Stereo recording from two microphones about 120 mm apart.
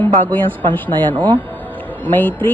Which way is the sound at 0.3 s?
15° left (ahead or behind).